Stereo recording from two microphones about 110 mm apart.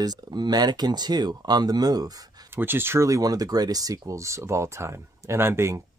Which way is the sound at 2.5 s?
20° right (ahead or behind).